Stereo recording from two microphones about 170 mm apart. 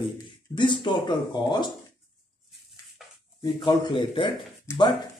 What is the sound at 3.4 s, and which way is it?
A man's voice, 25° left (ahead or behind).